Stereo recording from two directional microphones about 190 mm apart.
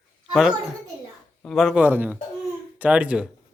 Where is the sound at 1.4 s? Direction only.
Centre (ahead or behind).